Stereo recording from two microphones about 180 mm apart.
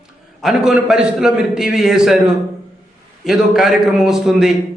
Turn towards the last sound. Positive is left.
turn(degrees=0)  # may be behind; listen again after turning